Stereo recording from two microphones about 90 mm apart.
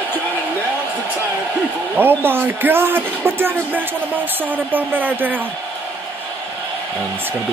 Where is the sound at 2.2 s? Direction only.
25° right (ahead or behind).